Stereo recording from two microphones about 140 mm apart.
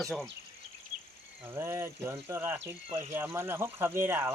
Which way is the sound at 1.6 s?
15° right (ahead or behind).